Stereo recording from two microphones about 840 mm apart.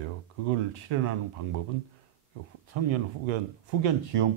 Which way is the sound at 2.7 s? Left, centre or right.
Right.